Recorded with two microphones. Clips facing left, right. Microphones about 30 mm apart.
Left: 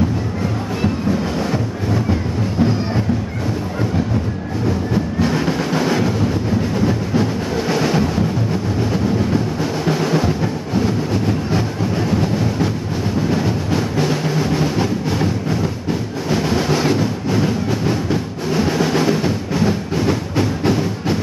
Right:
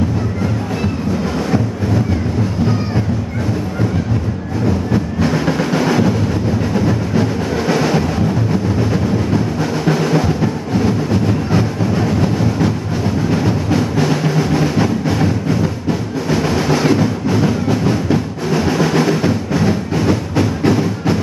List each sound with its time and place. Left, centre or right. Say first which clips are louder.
4.6 s train: right 2 dB; centre
6.7 s music: right 2 dB; centre